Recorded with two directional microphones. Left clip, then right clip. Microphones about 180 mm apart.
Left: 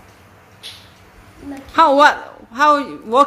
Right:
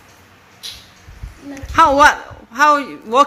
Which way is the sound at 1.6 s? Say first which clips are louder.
Right 1 dB; centre (ahead or behind).